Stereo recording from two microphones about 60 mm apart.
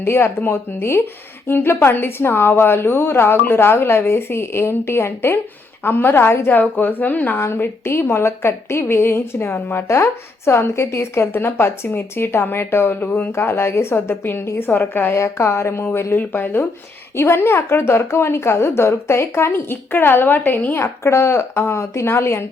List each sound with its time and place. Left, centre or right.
0.0 s a woman's voice: left
7.3 s a woman's voice: left
9.8 s a woman's voice: left
13.3 s a woman's voice: left
15.1 s a woman's voice: left
16.1 s a woman's voice: left
20.7 s a woman's voice: left